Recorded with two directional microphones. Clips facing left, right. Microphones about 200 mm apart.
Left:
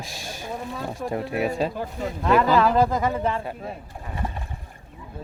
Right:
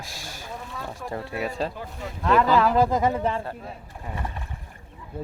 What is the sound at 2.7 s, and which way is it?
Speech, 15° right (ahead or behind).